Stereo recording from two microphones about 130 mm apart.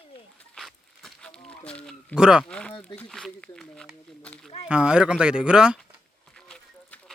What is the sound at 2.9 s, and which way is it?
Speech, 5° left (ahead or behind).